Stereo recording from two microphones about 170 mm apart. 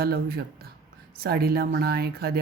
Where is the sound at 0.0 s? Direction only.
65° right (ahead or behind).